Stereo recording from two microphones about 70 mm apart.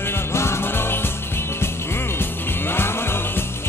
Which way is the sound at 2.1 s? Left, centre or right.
Left.